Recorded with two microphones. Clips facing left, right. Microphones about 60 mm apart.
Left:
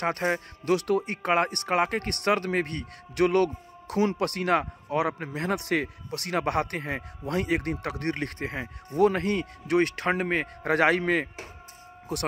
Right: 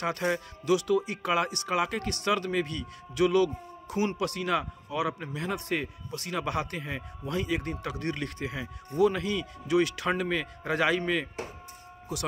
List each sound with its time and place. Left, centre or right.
0.0 s speech: left